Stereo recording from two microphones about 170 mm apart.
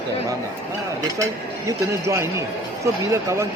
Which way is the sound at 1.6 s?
15° right (ahead or behind).